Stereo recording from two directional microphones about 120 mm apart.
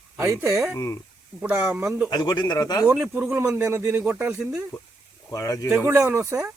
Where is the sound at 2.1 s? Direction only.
35° left (ahead or behind).